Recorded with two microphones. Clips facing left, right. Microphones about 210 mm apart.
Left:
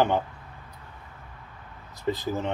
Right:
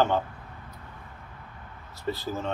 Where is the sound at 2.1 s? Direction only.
15° left (ahead or behind).